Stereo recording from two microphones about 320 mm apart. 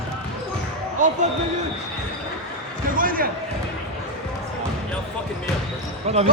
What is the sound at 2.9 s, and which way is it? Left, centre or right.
Basketball bounce, right.